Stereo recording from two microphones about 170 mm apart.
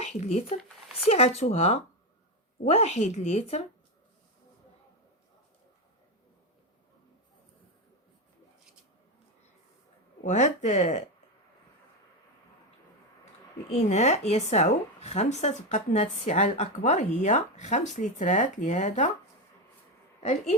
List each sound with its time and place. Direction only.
0.0 s a woman's voice: 40° left (ahead or behind)
10.2 s a woman's voice: 45° left (ahead or behind)
13.7 s a woman's voice: 40° left (ahead or behind)